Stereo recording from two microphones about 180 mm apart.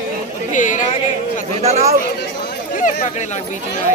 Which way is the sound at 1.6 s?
35° right (ahead or behind).